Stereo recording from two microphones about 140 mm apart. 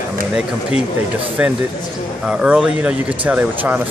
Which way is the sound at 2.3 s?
5° right (ahead or behind).